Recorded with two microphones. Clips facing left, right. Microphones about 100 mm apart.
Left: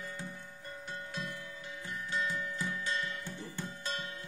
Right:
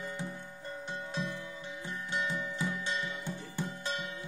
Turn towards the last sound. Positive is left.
turn(degrees=-20)  # may be behind; listen again after turning